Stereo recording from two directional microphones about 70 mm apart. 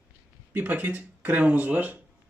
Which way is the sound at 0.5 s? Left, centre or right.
Right.